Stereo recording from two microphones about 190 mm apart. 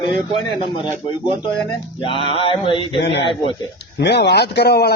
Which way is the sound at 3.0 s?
65° left (ahead or behind).